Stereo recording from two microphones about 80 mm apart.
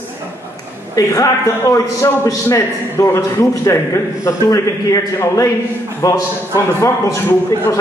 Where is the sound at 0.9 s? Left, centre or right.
Left.